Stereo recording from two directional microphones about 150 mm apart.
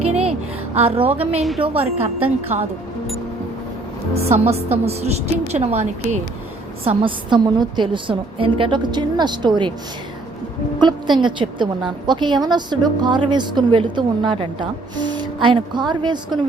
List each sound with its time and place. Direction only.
0.1 s a sound: 45° right (ahead or behind)
1.8 s a woman's voice: 40° right (ahead or behind)
2.5 s a woman's voice: 55° right (ahead or behind)
4.1 s a woman's voice: 45° right (ahead or behind)
6.8 s a woman's voice: 35° right (ahead or behind)
10.8 s a woman's voice: 30° right (ahead or behind)